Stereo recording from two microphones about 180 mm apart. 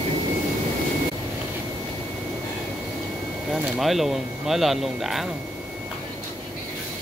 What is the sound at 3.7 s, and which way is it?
Speech, centre (ahead or behind).